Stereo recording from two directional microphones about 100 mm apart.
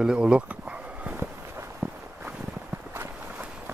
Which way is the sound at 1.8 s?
25° right (ahead or behind).